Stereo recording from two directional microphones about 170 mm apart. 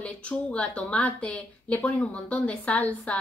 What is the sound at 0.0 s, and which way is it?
A woman's voice, 5° left (ahead or behind).